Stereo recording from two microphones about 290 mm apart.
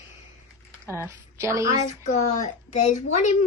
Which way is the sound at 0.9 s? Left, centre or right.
Centre.